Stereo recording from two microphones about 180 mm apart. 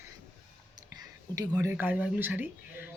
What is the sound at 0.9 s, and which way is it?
Speech, 20° right (ahead or behind).